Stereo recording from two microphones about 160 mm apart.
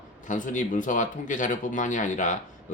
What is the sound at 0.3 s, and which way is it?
Speech, 55° left (ahead or behind).